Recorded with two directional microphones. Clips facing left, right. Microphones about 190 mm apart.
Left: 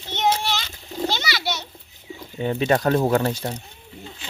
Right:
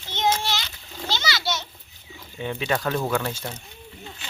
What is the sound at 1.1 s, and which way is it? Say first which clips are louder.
Children playing: right 1 dB; 60° left (ahead or behind).